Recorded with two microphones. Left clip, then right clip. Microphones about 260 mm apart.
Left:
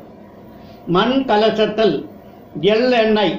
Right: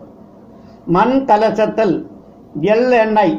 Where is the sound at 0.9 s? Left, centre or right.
Right.